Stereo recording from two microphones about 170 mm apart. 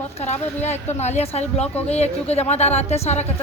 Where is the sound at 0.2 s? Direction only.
40° left (ahead or behind).